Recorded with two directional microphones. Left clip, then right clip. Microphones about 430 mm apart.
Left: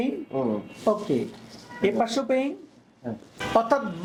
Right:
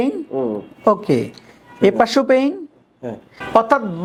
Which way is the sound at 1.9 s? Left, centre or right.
Right.